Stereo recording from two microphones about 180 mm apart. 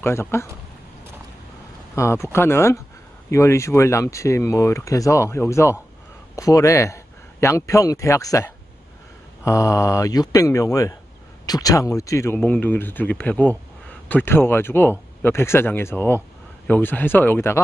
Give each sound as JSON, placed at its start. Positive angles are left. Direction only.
{"t": 0.0, "sound": "speech", "side_deg": 15}
{"t": 2.0, "sound": "a man's voice", "side_deg": 15}